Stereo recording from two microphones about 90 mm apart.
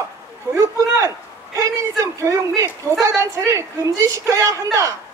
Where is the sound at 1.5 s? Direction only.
35° right (ahead or behind).